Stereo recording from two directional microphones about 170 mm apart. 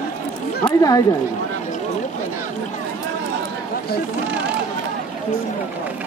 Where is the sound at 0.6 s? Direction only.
20° left (ahead or behind).